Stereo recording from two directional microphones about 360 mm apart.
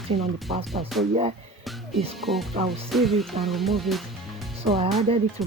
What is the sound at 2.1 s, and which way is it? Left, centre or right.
Music, centre.